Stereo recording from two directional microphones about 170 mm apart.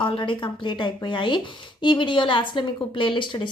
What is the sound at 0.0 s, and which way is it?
A woman's voice, 30° left (ahead or behind).